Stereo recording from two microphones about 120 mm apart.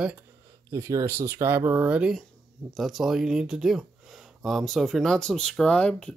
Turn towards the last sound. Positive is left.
turn(degrees=5)  # may be behind; listen again after turning